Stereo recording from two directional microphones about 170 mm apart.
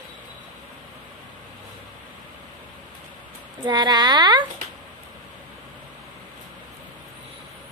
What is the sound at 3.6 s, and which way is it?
Speech, 25° right (ahead or behind).